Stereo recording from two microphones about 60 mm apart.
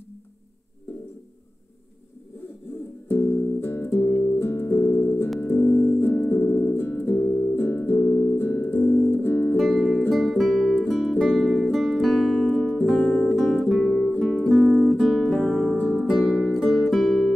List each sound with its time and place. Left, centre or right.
3.1 s music: left
9.6 s music: centre
12.4 s music: left
13.7 s music: centre
14.5 s music: centre
15.8 s music: left
16.2 s music: centre